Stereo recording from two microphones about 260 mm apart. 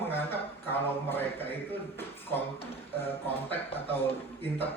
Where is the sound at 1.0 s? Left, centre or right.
Centre.